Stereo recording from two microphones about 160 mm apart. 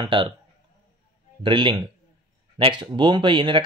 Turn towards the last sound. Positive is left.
turn(degrees=-30)  # may be behind; listen again after turning